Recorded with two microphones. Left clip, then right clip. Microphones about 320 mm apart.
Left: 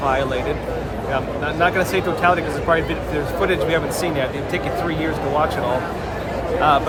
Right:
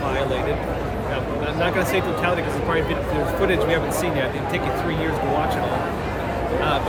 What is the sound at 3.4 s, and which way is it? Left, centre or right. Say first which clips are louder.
Speech: left 2 dB; centre.